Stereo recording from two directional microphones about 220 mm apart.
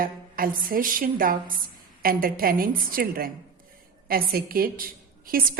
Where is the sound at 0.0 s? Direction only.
40° right (ahead or behind).